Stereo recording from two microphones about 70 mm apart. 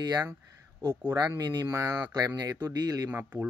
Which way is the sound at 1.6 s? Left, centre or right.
Right.